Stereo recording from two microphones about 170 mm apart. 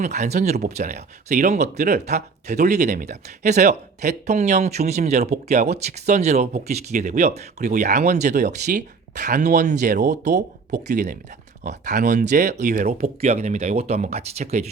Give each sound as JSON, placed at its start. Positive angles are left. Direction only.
{"t": 0.0, "sound": "speech", "side_deg": -45}
{"t": 9.9, "sound": "speech", "side_deg": -75}
{"t": 10.7, "sound": "speech", "side_deg": -45}